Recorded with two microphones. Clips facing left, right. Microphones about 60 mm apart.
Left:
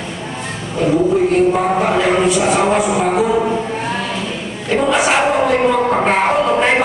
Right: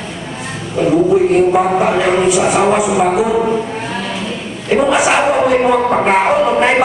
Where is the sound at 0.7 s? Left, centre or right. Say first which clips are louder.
Right 3 dB; centre.